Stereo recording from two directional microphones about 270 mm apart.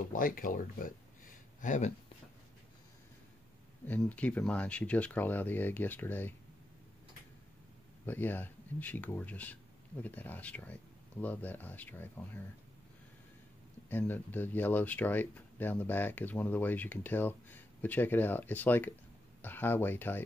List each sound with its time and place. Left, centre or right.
0.1 s speech: left
3.8 s speech: centre
8.1 s speech: centre
13.8 s speech: centre